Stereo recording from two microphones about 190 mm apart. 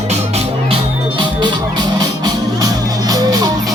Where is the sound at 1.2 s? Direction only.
25° right (ahead or behind).